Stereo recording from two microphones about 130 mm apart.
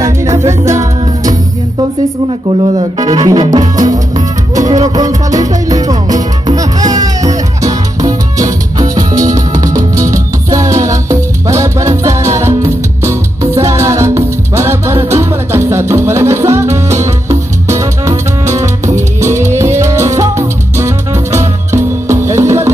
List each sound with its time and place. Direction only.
0.0 s music: 25° right (ahead or behind)
3.0 s music: 30° right (ahead or behind)